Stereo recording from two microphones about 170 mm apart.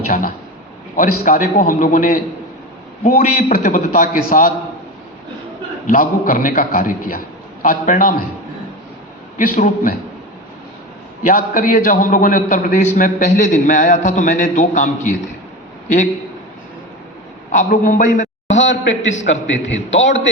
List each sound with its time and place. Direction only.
0.1 s a man's voice: 55° left (ahead or behind)
5.9 s a man's voice: 55° left (ahead or behind)
9.6 s a man's voice: 50° left (ahead or behind)
11.2 s a man's voice: 50° left (ahead or behind)
17.5 s a man's voice: 45° left (ahead or behind)
18.5 s a man's voice: 90° left